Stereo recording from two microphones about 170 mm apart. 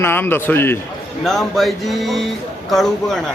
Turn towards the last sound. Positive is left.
turn(degrees=0)  # may be behind; listen again after turning